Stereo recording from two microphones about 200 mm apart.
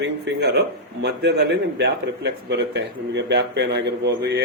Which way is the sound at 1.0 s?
60° right (ahead or behind).